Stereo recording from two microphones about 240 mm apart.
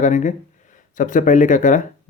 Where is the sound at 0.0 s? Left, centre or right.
Left.